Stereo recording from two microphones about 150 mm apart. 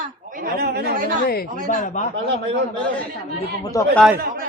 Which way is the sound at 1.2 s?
80° left.